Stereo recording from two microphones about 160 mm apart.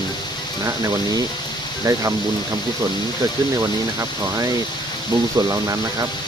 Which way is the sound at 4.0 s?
20° right (ahead or behind).